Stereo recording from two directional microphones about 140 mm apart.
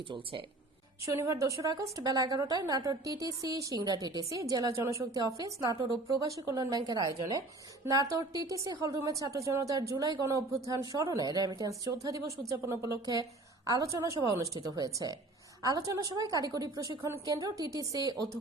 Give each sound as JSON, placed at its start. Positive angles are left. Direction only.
{"t": 0.1, "sound": "speech", "side_deg": -40}
{"t": 1.2, "sound": "a woman's voice", "side_deg": -20}